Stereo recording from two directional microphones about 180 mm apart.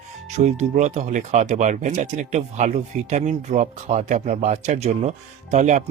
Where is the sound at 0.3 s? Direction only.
40° right (ahead or behind).